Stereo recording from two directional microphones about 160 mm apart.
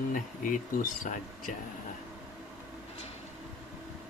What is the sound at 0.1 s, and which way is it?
Speech, 55° left (ahead or behind).